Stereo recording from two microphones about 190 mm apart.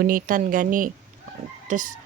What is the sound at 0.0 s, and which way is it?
Speech, 45° right (ahead or behind).